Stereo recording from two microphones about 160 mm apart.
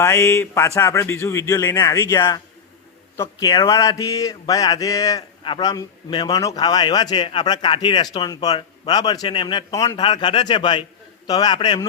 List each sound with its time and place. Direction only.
0.0 s speech: 15° left (ahead or behind)
3.2 s mantra: 20° left (ahead or behind)